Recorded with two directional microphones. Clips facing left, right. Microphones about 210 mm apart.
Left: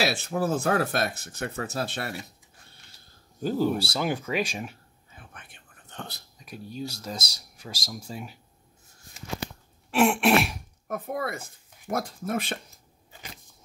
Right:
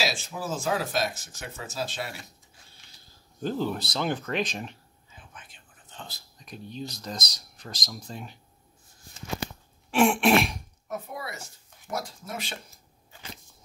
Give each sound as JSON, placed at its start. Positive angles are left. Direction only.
{"t": 0.0, "sound": "speech", "side_deg": 60}
{"t": 3.4, "sound": "speech", "side_deg": 10}
{"t": 5.1, "sound": "whispering", "side_deg": 60}
{"t": 6.3, "sound": "speech", "side_deg": 5}
{"t": 9.8, "sound": "throat clearing", "side_deg": 0}
{"t": 10.9, "sound": "a woman's voice", "side_deg": 55}